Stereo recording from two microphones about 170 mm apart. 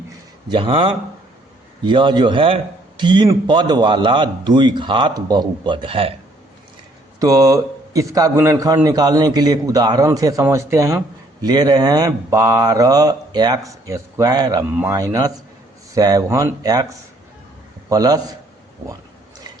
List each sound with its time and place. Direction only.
0.5 s a man's voice: 30° right (ahead or behind)
7.2 s a man's voice: 20° right (ahead or behind)
17.8 s a man's voice: 20° right (ahead or behind)